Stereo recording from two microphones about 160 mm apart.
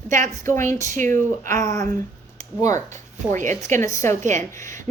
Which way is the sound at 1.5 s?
20° left (ahead or behind).